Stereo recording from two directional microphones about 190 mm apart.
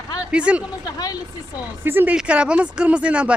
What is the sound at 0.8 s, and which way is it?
Speech, 20° left (ahead or behind).